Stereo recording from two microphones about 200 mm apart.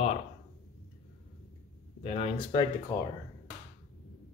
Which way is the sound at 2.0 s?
30° left (ahead or behind).